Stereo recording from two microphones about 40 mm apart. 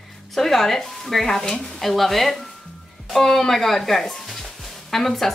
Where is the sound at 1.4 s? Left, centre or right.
Centre.